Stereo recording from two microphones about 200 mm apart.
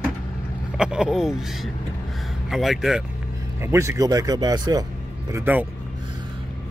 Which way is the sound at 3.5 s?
15° right (ahead or behind).